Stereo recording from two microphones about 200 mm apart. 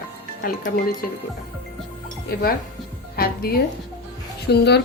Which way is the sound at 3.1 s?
50° left (ahead or behind).